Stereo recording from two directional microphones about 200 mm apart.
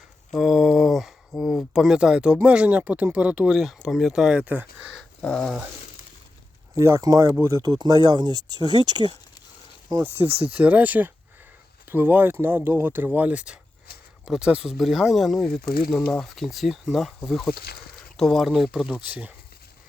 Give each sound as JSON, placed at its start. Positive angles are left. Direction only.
{"t": 0.3, "sound": "speech", "side_deg": 0}
{"t": 6.7, "sound": "speech", "side_deg": -15}
{"t": 9.9, "sound": "speech", "side_deg": -10}
{"t": 15.6, "sound": "speech", "side_deg": 50}
{"t": 15.9, "sound": "speech", "side_deg": 5}
{"t": 17.5, "sound": "speech", "side_deg": 50}
{"t": 18.2, "sound": "speech", "side_deg": 0}